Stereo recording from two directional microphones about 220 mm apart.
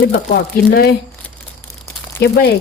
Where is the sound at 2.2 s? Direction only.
45° left (ahead or behind).